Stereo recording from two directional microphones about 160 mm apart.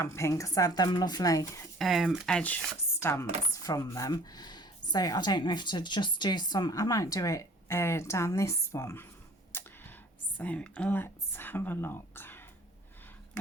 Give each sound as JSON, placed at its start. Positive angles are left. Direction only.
{"t": 0.0, "sound": "chopping", "side_deg": 15}
{"t": 1.8, "sound": "chopping", "side_deg": 0}
{"t": 9.5, "sound": "a sound", "side_deg": 15}
{"t": 10.3, "sound": "speech", "side_deg": 10}